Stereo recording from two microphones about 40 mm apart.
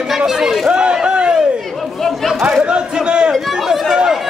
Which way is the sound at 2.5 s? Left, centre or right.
Right.